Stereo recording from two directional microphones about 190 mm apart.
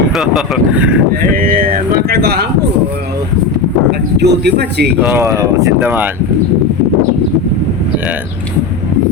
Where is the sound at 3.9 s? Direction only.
60° right (ahead or behind).